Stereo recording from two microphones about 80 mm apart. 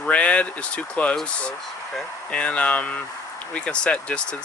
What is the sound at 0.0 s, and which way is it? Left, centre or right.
Speech, centre.